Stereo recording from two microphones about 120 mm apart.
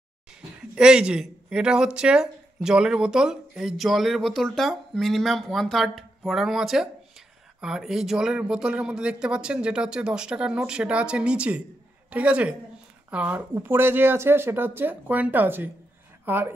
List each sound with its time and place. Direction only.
0.7 s speech: 5° right (ahead or behind)